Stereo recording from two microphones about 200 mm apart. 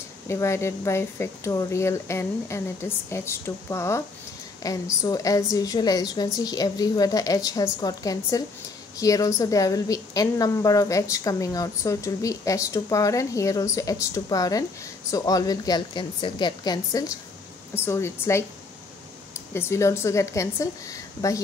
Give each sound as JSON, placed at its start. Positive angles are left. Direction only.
{"t": 0.3, "sound": "a woman's voice", "side_deg": 15}